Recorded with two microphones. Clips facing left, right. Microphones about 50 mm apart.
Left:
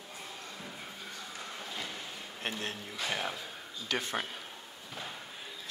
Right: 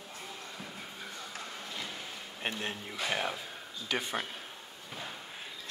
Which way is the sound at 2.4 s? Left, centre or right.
Centre.